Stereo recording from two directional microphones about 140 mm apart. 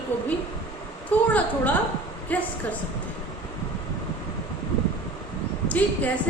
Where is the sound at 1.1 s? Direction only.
10° left (ahead or behind).